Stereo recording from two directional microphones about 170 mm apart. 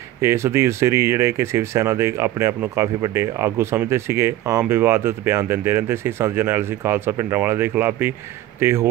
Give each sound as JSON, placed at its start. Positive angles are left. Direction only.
{"t": 0.2, "sound": "speech", "side_deg": -15}